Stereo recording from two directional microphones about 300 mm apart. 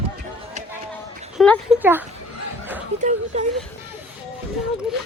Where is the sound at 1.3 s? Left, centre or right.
Centre.